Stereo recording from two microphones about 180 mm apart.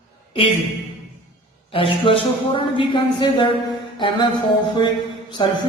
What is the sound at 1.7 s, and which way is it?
Speech, 30° left (ahead or behind).